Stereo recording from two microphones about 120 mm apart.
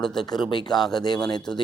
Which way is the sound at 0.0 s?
5° left (ahead or behind).